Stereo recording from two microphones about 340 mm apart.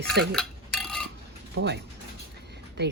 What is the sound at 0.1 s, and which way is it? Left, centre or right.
Cutlery, centre.